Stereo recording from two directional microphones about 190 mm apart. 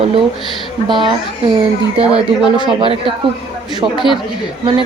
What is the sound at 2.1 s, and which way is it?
Speech, 25° right (ahead or behind).